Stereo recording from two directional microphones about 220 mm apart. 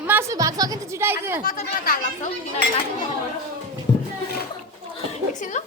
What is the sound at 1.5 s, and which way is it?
Speech, 40° left (ahead or behind).